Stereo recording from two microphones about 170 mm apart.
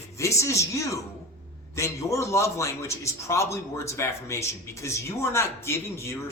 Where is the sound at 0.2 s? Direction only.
15° left (ahead or behind).